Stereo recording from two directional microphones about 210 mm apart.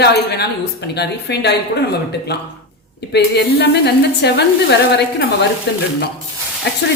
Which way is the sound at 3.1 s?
50° left (ahead or behind).